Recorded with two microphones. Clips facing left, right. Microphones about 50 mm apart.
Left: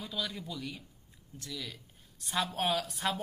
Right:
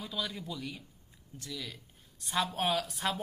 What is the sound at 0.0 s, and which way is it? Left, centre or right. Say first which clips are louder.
Speech: even; centre.